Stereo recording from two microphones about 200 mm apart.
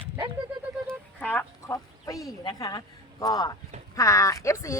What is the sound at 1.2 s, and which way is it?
Speech, 10° left (ahead or behind).